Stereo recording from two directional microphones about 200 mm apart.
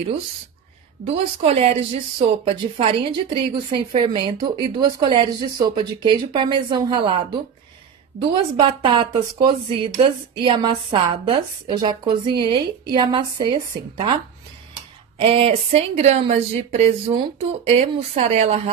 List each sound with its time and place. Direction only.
1.0 s a woman's voice: 30° right (ahead or behind)
8.5 s a woman's voice: 25° right (ahead or behind)
15.1 s a woman's voice: 30° right (ahead or behind)